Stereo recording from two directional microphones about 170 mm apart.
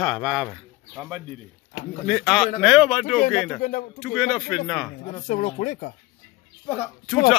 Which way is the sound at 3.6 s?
50° left (ahead or behind).